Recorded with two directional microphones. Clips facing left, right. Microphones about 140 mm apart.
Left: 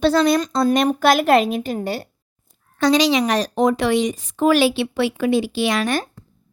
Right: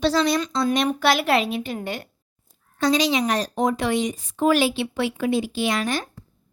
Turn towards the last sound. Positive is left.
turn(degrees=85)